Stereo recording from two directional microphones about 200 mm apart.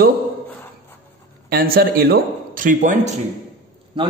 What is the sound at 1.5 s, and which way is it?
Speech, 50° right (ahead or behind).